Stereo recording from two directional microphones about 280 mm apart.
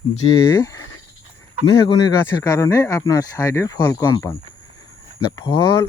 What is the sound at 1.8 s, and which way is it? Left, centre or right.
Speech, centre.